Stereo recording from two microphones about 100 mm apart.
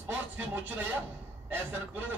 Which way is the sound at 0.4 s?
25° right (ahead or behind).